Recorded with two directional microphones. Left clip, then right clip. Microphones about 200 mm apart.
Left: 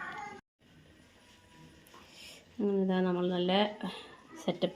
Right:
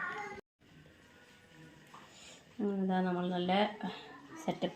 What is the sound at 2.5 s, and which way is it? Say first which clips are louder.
A woman's voice: left 4 dB; 25° left (ahead or behind).